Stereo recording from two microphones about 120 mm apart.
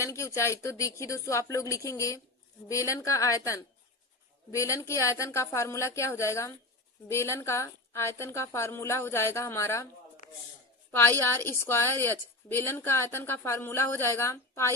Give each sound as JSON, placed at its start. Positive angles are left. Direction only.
{"t": 0.0, "sound": "a woman's voice", "side_deg": 25}
{"t": 10.9, "sound": "a woman's voice", "side_deg": 20}